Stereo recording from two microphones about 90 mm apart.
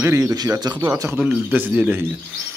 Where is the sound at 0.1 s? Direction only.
40° right (ahead or behind).